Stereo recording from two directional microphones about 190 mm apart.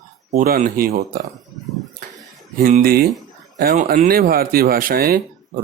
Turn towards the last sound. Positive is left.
turn(degrees=-50)  # may be behind; listen again after turning